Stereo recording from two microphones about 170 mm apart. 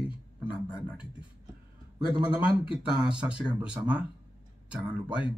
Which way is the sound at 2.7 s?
5° right (ahead or behind).